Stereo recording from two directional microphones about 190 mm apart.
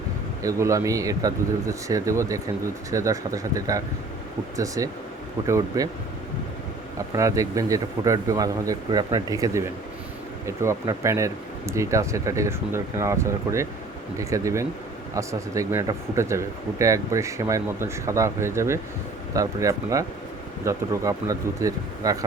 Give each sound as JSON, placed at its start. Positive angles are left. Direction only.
{"t": 0.4, "sound": "speech", "side_deg": -15}
{"t": 7.1, "sound": "speech", "side_deg": -15}